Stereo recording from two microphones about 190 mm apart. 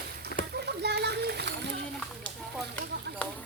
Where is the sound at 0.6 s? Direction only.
60° right (ahead or behind).